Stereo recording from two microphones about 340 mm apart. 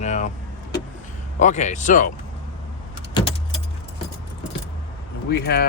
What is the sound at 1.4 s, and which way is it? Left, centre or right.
Speech, left.